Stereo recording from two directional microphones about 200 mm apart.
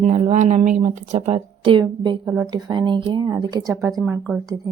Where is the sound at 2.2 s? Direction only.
10° right (ahead or behind).